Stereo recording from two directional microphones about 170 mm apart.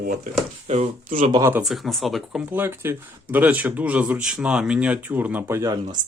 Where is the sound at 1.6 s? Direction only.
Centre (ahead or behind).